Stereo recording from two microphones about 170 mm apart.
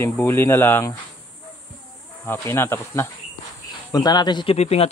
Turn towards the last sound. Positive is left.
turn(degrees=40)  # may be behind; listen again after turning